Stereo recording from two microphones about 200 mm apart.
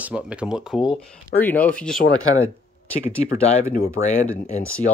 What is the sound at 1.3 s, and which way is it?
Speech, 10° left (ahead or behind).